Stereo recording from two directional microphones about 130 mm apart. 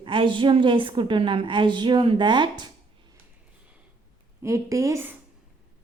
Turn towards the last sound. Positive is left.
turn(degrees=-20)  # may be behind; listen again after turning